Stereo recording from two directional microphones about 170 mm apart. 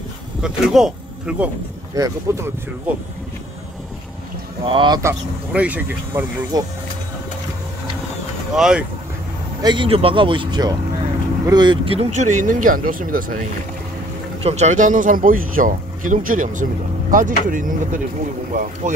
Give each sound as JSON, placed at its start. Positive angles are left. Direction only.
{"t": 0.4, "sound": "speech", "side_deg": 0}
{"t": 2.0, "sound": "speech", "side_deg": -20}
{"t": 4.6, "sound": "speech", "side_deg": -25}
{"t": 5.5, "sound": "speech", "side_deg": -10}
{"t": 6.5, "sound": "speech", "side_deg": -20}
{"t": 8.5, "sound": "speech", "side_deg": -5}
{"t": 9.6, "sound": "speech", "side_deg": -25}
{"t": 14.4, "sound": "speech", "side_deg": -40}